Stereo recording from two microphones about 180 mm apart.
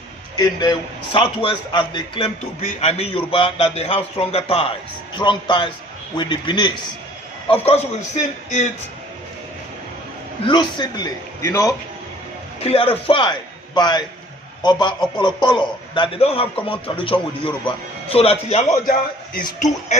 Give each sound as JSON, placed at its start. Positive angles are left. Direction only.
{"t": 0.3, "sound": "a man's voice", "side_deg": 20}
{"t": 10.4, "sound": "a man's voice", "side_deg": 25}
{"t": 12.5, "sound": "a man's voice", "side_deg": 35}
{"t": 18.9, "sound": "a man's voice", "side_deg": 50}